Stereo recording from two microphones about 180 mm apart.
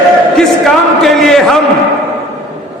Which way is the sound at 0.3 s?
Centre (ahead or behind).